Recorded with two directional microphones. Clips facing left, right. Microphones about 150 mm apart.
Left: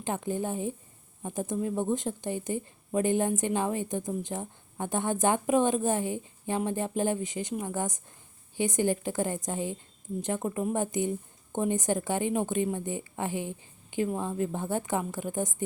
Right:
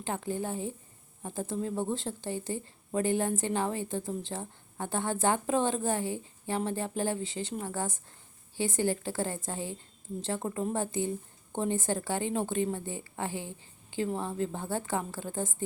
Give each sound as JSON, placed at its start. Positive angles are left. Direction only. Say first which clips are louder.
{"t": 0.0, "sound": "a woman's voice", "louder": "left 2 dB", "side_deg": 20}